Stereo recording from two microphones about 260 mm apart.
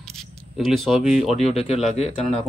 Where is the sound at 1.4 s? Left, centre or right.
Left.